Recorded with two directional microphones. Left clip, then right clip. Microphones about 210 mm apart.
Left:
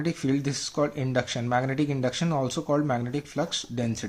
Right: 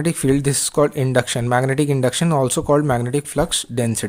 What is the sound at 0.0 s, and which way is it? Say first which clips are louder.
Speech: right 9 dB; 50° right (ahead or behind).